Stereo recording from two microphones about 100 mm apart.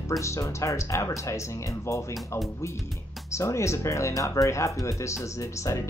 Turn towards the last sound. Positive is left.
turn(degrees=30)  # may be behind; listen again after turning